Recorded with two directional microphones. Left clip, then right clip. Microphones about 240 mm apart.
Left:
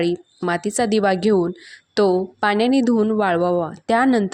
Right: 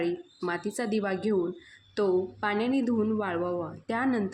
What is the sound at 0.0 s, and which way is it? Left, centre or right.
Speech, left.